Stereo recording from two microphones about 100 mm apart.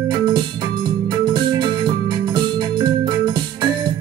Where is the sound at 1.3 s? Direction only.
50° right (ahead or behind).